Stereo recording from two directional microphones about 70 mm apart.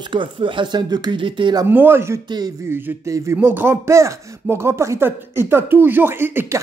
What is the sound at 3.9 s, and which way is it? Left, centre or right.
Speech, right.